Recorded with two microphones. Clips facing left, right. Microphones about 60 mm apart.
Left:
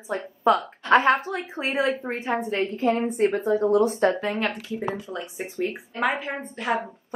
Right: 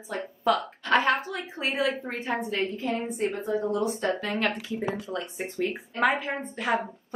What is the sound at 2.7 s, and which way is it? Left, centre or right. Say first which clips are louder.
A woman's voice: left 7 dB; left.